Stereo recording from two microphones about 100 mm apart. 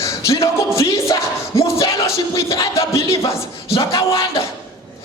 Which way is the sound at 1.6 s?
30° left (ahead or behind).